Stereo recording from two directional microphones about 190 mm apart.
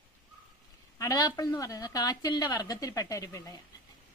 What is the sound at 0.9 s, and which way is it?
A woman's voice, 20° left (ahead or behind).